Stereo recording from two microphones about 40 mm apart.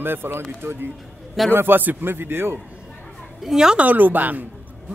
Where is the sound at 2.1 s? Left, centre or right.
Right.